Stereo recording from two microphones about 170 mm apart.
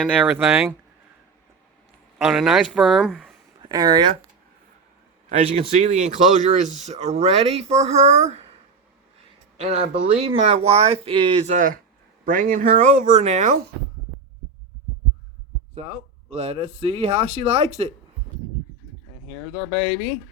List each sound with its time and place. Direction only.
0.0 s speech: 10° right (ahead or behind)
2.1 s speech: 5° right (ahead or behind)
3.6 s speech: 25° right (ahead or behind)
5.3 s speech: 40° right (ahead or behind)
9.6 s speech: 40° right (ahead or behind)
11.5 s speech: 50° right (ahead or behind)
15.7 s speech: 40° right (ahead or behind)